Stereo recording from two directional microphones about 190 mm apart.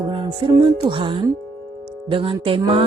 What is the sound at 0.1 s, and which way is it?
Speech, 25° right (ahead or behind).